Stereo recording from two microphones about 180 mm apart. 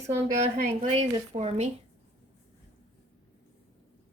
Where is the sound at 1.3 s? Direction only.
35° right (ahead or behind).